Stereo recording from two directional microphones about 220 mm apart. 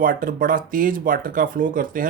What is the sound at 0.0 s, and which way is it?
Speech, 40° right (ahead or behind).